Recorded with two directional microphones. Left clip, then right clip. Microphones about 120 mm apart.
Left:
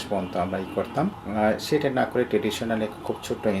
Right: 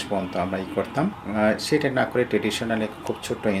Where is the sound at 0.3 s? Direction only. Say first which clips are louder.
Even; 30° right (ahead or behind).